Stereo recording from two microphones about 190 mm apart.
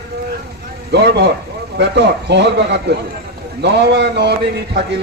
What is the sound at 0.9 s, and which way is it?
A man's voice, 60° right (ahead or behind).